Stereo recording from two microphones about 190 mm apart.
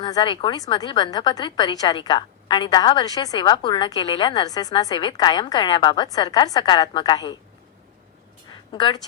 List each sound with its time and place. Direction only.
0.0 s a woman's voice: 20° left (ahead or behind)
8.7 s a woman's voice: 25° left (ahead or behind)